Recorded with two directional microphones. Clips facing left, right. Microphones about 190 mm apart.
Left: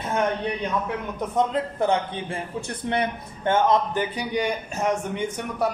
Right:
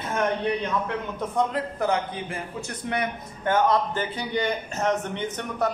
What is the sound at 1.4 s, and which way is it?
A man's voice, 25° left (ahead or behind).